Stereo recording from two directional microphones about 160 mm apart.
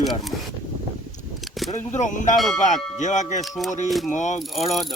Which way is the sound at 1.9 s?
50° left (ahead or behind).